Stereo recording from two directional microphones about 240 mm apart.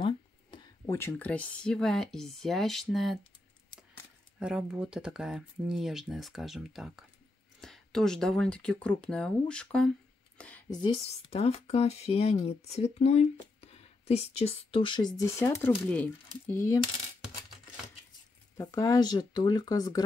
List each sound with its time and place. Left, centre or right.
0.0 s speech: centre
4.4 s speech: centre
10.7 s speech: left
18.6 s speech: centre